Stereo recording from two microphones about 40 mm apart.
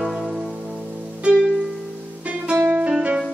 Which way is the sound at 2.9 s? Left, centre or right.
Right.